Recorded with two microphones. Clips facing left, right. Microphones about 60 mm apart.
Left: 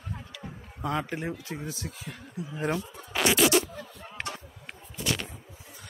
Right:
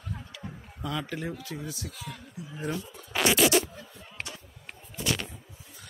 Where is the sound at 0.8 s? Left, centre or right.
Left.